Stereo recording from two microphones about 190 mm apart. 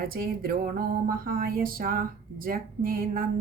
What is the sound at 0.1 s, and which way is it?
Speech, 50° right (ahead or behind).